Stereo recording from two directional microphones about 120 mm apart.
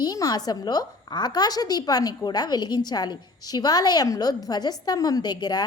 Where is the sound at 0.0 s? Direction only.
30° left (ahead or behind).